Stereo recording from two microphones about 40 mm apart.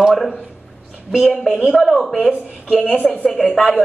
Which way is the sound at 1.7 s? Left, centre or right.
Centre.